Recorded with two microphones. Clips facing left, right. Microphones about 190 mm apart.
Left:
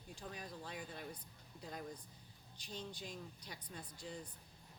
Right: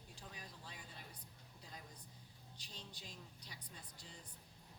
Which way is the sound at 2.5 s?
50° left (ahead or behind).